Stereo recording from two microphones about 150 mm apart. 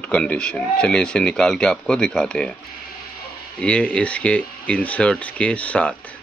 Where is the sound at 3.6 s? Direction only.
5° left (ahead or behind).